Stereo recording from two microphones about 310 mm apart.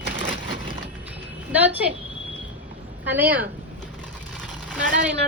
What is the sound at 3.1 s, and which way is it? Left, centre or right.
Speech, centre.